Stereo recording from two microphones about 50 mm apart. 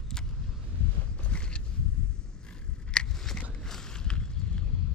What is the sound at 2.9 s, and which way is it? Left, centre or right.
Biting, centre.